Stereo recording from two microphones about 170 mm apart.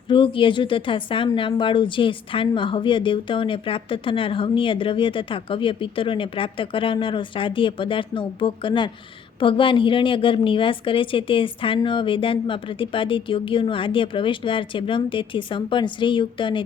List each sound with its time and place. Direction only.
0.1 s a woman's voice: 30° left (ahead or behind)